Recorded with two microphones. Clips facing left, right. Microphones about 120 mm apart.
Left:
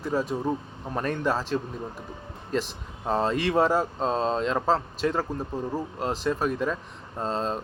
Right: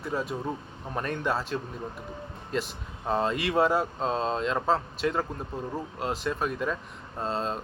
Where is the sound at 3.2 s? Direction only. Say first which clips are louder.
Left 3 dB; 35° left (ahead or behind).